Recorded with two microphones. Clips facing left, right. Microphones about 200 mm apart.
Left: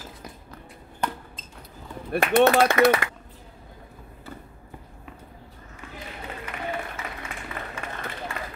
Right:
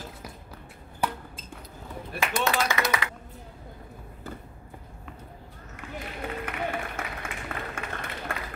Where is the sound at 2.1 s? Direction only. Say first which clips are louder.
Left 10 dB; 60° left (ahead or behind).